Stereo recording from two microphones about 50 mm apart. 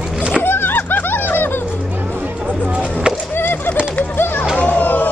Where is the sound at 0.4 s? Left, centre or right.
Left.